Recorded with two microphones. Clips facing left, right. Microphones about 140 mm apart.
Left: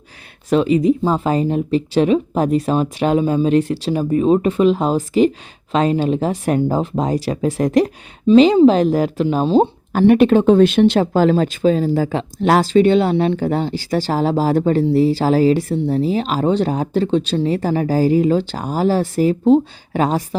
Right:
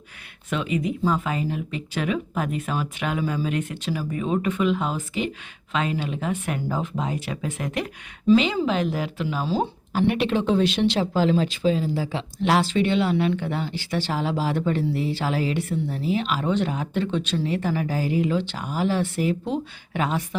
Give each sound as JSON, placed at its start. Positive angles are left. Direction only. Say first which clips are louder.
{"t": 0.5, "sound": "speech", "louder": "left 11 dB", "side_deg": 35}
{"t": 9.2, "sound": "speech", "louder": "left 10 dB", "side_deg": 25}
{"t": 9.9, "sound": "speech", "louder": "left 11 dB", "side_deg": 45}